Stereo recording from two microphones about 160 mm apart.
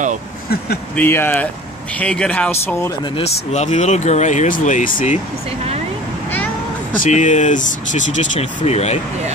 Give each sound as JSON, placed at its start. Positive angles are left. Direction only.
{"t": 0.9, "sound": "speech", "side_deg": 15}
{"t": 3.2, "sound": "speech", "side_deg": 45}
{"t": 7.0, "sound": "speech", "side_deg": 50}